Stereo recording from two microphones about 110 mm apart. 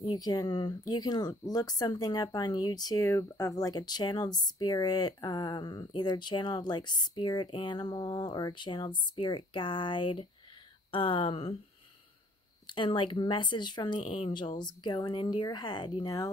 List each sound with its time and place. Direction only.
0.0 s speech: 40° left (ahead or behind); by 11.5 s 60° left (ahead or behind)
12.6 s speech: 50° left (ahead or behind)